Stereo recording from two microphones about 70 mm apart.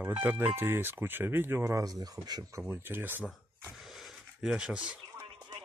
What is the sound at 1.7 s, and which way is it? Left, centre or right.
Speech, right.